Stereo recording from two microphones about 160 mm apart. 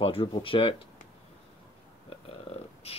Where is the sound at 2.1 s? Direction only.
35° left (ahead or behind).